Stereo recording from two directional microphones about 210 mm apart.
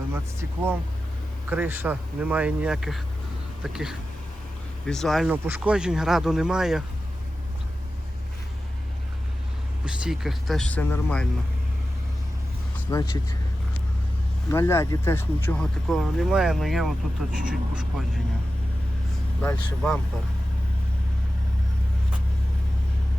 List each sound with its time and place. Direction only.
0.1 s speech: 10° right (ahead or behind)
9.8 s speech: 5° right (ahead or behind)
12.9 s speech: 15° left (ahead or behind)
14.5 s speech: 10° left (ahead or behind); by 18.0 s 5° right (ahead or behind)
19.4 s speech: 5° left (ahead or behind)